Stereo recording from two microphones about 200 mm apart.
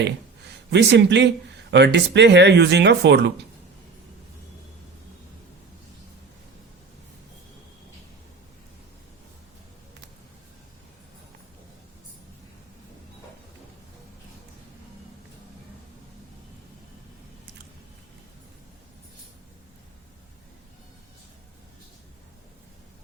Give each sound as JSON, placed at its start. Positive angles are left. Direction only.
{"t": 0.7, "sound": "speech", "side_deg": -60}